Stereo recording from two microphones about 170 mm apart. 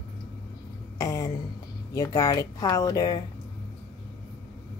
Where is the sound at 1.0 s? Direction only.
20° left (ahead or behind).